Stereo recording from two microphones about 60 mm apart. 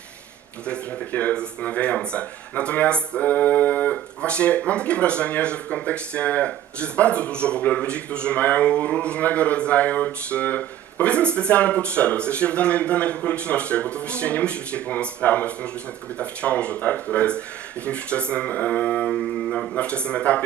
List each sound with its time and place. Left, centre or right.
0.7 s speech: left